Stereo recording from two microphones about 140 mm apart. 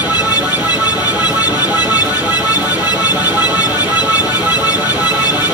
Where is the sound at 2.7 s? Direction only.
10° right (ahead or behind).